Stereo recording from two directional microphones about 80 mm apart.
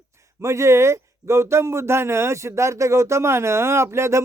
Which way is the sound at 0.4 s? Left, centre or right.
Right.